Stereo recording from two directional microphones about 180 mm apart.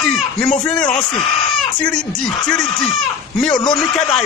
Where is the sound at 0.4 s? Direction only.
5° left (ahead or behind).